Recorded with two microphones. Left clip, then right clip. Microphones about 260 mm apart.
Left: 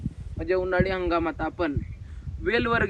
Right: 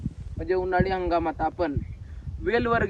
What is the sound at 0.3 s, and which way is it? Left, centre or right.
Speech, centre.